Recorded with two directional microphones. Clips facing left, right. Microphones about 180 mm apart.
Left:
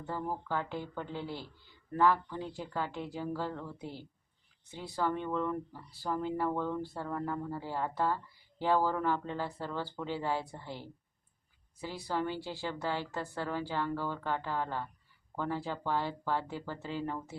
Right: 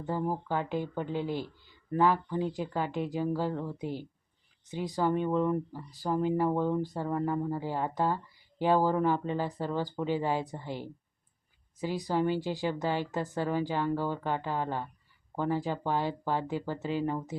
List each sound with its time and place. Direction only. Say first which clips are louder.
0.0 s speech: right 5 dB; 15° right (ahead or behind)